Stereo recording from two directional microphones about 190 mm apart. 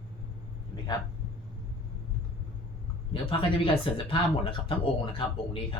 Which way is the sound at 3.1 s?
25° left (ahead or behind).